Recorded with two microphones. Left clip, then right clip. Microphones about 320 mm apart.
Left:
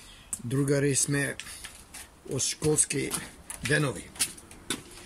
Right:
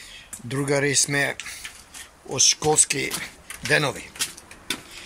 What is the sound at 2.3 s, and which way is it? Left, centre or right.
Speech, centre.